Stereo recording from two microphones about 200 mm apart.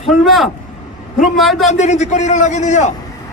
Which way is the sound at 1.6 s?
35° left (ahead or behind).